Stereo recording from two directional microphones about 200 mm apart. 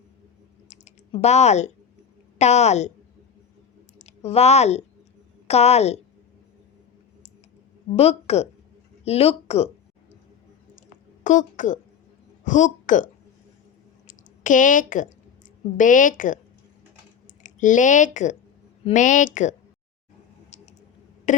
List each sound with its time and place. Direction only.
0.7 s typing: 35° left (ahead or behind)
2.4 s speech: 35° left (ahead or behind)
3.9 s speech: 30° left (ahead or behind)
7.9 s speech: 30° left (ahead or behind)
11.2 s a woman's voice: 40° left (ahead or behind)
14.1 s a sound: 40° left (ahead or behind)
15.8 s speech: 40° left (ahead or behind)
17.4 s speech: 40° left (ahead or behind)
21.3 s a sound: 40° left (ahead or behind)